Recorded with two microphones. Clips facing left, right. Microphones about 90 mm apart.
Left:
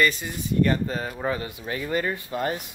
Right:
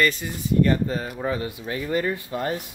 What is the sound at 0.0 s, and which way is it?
Speech, 20° left (ahead or behind).